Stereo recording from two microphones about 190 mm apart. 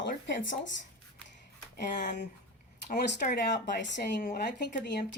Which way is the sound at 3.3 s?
65° left (ahead or behind).